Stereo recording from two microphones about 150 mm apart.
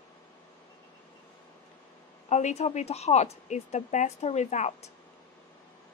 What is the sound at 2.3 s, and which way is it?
A woman's voice, 50° left (ahead or behind).